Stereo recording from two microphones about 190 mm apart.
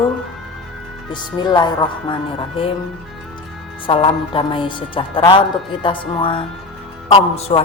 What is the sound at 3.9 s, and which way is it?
A woman's voice, 25° left (ahead or behind).